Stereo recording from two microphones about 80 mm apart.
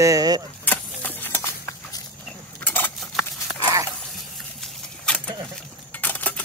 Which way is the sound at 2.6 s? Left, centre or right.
Left.